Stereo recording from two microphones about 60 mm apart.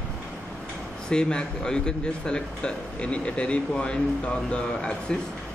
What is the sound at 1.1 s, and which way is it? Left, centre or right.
Speech, centre.